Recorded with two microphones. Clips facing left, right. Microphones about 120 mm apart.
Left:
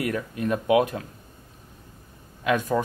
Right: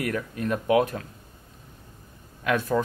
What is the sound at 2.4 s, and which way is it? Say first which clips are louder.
Speech: left 1 dB; 15° left (ahead or behind).